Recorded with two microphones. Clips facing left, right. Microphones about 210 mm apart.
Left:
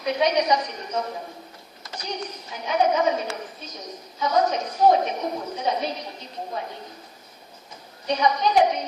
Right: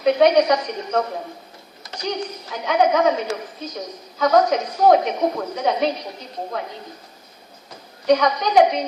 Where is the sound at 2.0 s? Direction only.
90° right.